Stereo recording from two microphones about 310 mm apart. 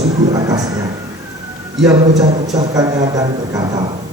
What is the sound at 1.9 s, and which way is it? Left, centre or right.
A man's voice, centre.